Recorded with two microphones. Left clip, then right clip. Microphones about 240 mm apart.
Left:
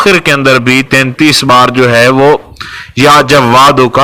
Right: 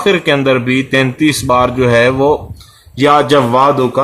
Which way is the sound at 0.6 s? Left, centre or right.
Left.